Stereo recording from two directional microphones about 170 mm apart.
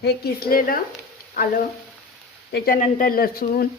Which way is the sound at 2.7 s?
50° left (ahead or behind).